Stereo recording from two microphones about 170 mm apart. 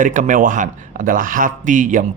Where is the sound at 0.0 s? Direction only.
50° right (ahead or behind).